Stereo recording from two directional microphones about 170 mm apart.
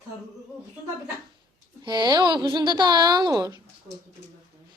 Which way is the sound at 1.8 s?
25° right (ahead or behind).